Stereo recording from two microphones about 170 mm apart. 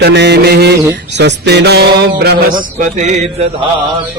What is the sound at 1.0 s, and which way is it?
Mantra, 90° right.